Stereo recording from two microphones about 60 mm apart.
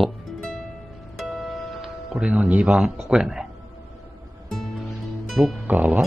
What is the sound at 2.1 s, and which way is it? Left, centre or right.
Speech, centre.